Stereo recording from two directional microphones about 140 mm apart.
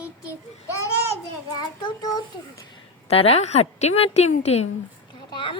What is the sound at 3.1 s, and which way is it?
A woman's voice, 45° left (ahead or behind).